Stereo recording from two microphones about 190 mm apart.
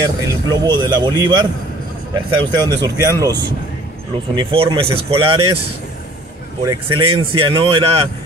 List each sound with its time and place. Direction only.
0.3 s speech: 25° right (ahead or behind)
4.4 s speech: 25° right (ahead or behind)
6.6 s speech: 20° right (ahead or behind)